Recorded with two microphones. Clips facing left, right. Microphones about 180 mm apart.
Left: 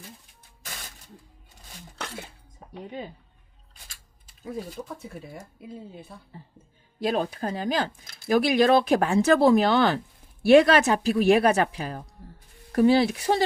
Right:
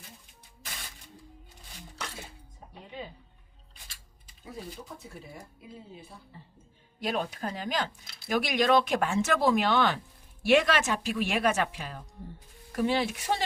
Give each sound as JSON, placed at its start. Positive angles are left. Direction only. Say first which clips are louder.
{"t": 4.8, "sound": "speech", "louder": "left 8 dB", "side_deg": 70}
{"t": 5.4, "sound": "speech", "louder": "left 6 dB", "side_deg": 60}
{"t": 7.0, "sound": "speech", "louder": "left 5 dB", "side_deg": 35}
{"t": 8.4, "sound": "speech", "louder": "left 4 dB", "side_deg": 35}